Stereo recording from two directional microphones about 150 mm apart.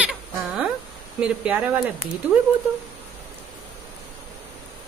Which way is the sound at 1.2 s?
5° right (ahead or behind).